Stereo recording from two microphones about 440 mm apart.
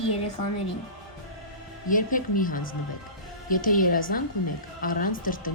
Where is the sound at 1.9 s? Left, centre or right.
Centre.